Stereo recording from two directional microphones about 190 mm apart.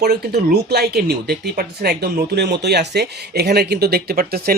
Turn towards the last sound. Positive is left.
turn(degrees=-55)  # may be behind; listen again after turning